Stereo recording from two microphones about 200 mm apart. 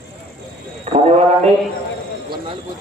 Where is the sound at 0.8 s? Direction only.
30° right (ahead or behind).